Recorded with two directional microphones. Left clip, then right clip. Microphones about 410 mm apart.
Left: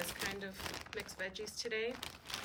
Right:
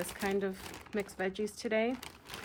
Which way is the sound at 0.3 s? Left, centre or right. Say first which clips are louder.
Right 8 dB; centre.